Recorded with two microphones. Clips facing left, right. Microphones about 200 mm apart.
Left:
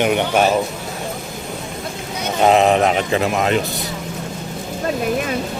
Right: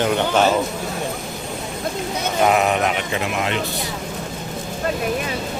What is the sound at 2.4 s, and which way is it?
Speech, 25° left (ahead or behind).